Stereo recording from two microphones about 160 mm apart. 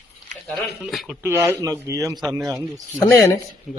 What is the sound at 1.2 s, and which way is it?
A man's voice, 15° right (ahead or behind).